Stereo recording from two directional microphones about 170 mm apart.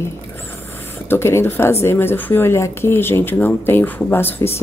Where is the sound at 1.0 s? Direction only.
15° left (ahead or behind).